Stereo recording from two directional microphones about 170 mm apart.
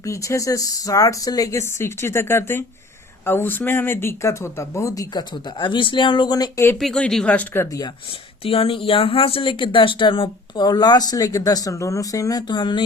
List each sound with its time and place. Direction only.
0.0 s speech: 20° left (ahead or behind)
6.7 s speech: 5° left (ahead or behind)
8.4 s speech: 35° left (ahead or behind)